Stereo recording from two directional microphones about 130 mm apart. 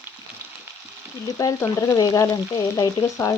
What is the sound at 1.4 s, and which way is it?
Frying, 25° left (ahead or behind).